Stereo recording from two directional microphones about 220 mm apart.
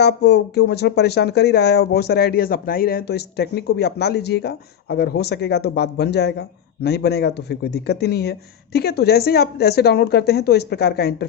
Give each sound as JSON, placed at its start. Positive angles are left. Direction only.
{"t": 0.0, "sound": "speech", "side_deg": 50}